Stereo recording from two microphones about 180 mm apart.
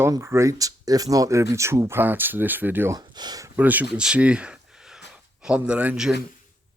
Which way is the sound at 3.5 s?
10° right (ahead or behind).